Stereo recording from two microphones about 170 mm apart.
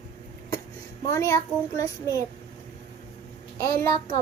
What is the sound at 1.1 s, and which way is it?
Speech, 20° left (ahead or behind).